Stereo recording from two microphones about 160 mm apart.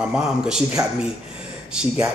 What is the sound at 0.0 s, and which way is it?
Speech, 5° right (ahead or behind).